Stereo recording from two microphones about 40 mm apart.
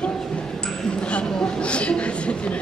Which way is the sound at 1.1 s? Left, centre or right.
Left.